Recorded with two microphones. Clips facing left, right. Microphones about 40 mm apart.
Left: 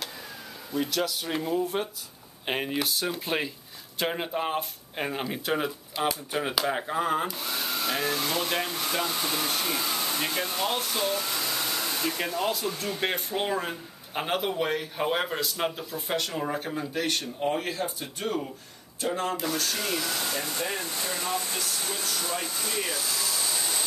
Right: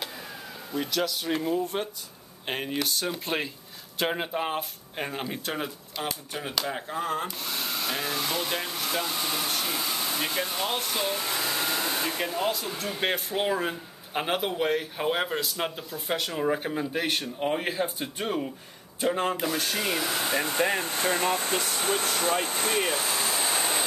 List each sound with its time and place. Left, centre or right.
0.7 s speech: centre
7.4 s hair dryer: centre
12.3 s speech: centre; by 23.9 s right